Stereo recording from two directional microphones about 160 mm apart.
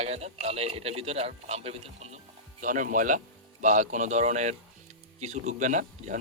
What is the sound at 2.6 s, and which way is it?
A man's voice, 55° right (ahead or behind).